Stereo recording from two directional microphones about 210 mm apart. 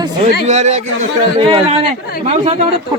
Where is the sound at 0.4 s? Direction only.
35° right (ahead or behind).